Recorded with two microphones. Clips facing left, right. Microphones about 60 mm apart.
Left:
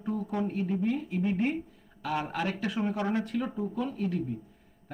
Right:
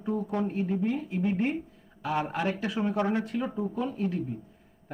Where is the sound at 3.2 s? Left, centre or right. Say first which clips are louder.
Right 1 dB; right.